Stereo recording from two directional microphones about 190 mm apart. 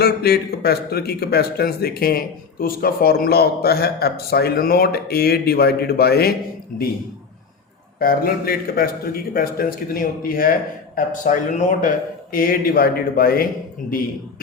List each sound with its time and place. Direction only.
0.0 s speech: 55° left (ahead or behind)
6.7 s a man's voice: 5° left (ahead or behind)
7.9 s a man's voice: 50° left (ahead or behind)